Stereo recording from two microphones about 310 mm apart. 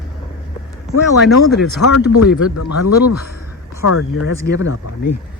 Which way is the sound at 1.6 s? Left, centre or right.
Left.